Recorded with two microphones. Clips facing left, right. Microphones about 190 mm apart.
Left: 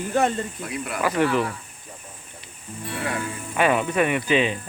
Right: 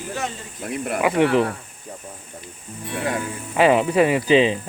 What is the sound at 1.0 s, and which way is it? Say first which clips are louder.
Speech: right 4 dB; 20° right (ahead or behind).